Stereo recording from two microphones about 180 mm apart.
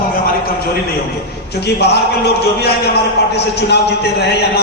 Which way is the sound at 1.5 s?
65° left (ahead or behind).